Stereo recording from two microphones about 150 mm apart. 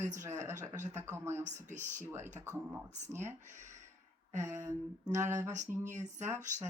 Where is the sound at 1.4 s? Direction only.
55° right (ahead or behind).